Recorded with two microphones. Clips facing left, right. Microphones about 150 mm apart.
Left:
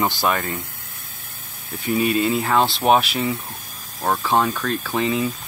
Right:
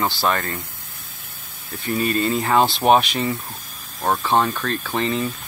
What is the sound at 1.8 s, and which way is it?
Speech, 10° left (ahead or behind).